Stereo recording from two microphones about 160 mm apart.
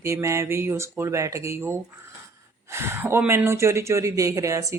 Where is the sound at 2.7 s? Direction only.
15° right (ahead or behind).